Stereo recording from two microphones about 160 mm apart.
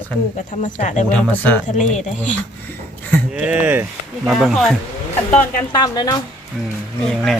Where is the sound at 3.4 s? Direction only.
10° right (ahead or behind).